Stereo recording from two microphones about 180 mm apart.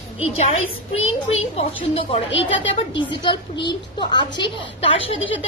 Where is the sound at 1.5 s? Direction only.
35° left (ahead or behind).